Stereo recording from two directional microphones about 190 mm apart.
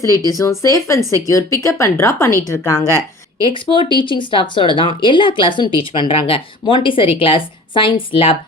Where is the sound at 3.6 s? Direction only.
25° left (ahead or behind).